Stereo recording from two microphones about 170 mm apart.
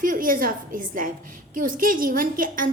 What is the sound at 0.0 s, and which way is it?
A woman's voice, 55° right (ahead or behind).